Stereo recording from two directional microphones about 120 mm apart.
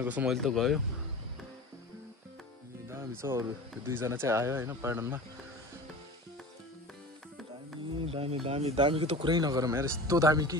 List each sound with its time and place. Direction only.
0.0 s speech: 15° right (ahead or behind)
0.3 s speech: centre (ahead or behind)
2.9 s speech: 20° right (ahead or behind)
8.0 s speech: 50° right (ahead or behind)
9.3 s speech: 35° right (ahead or behind)